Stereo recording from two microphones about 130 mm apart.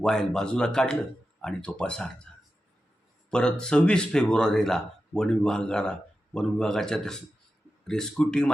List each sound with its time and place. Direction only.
0.0 s speech: 5° left (ahead or behind)
3.2 s speech: 5° left (ahead or behind)